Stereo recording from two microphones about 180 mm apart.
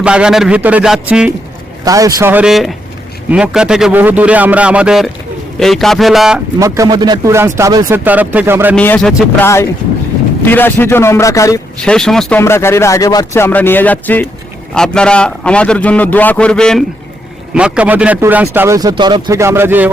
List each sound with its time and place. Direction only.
0.0 s a man's voice: 5° right (ahead or behind)
1.8 s speech: 20° right (ahead or behind)
2.3 s a man's voice: 5° right (ahead or behind)
6.6 s speech: 15° right (ahead or behind)
8.7 s speech: 5° left (ahead or behind)
10.5 s speech: 10° left (ahead or behind)
11.8 s a man's voice: 5° left (ahead or behind)
12.4 s a man's voice: 15° left (ahead or behind)
17.5 s speech: 5° right (ahead or behind)